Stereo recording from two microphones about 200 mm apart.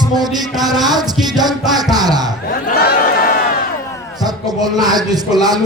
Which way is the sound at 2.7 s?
50° left (ahead or behind).